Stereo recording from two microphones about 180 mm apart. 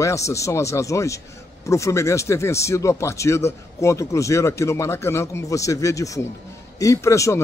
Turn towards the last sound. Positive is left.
turn(degrees=15)  # may be behind; listen again after turning